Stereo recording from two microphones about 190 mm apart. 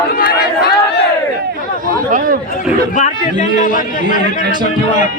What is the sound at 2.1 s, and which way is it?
Speech, 45° right (ahead or behind).